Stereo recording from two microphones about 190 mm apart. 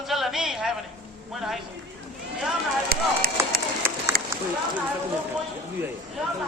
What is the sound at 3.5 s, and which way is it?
Run, 50° right (ahead or behind).